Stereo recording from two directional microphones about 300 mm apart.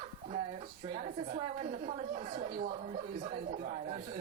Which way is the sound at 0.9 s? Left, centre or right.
Right.